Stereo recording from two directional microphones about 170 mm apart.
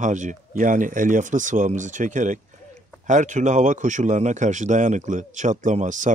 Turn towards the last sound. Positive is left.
turn(degrees=-45)  # may be behind; listen again after turning